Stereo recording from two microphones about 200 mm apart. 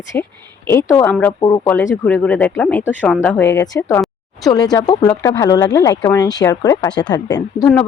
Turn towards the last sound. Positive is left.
turn(degrees=20)  # may be behind; listen again after turning